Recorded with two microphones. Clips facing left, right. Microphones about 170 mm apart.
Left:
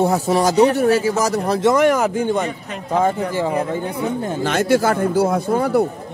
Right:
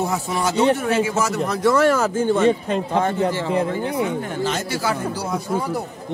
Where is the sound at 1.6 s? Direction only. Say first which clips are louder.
Left 1 dB; 20° left (ahead or behind).